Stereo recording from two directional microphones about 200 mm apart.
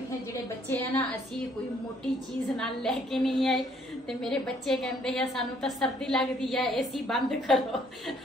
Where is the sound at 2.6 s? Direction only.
Centre (ahead or behind).